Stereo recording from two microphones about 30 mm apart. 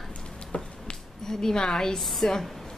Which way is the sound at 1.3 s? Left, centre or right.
Left.